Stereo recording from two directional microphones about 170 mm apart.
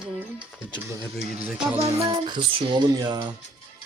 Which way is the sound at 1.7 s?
30° right (ahead or behind).